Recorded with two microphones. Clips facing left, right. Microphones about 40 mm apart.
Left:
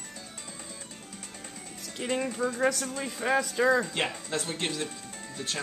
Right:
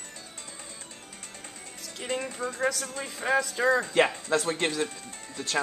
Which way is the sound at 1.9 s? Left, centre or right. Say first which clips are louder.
Left 2 dB; centre.